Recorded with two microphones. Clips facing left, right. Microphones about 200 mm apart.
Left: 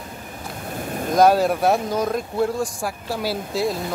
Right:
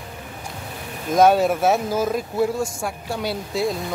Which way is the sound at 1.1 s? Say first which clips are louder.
Even; centre (ahead or behind).